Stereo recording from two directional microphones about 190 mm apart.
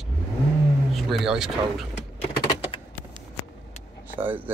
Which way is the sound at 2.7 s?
30° left (ahead or behind).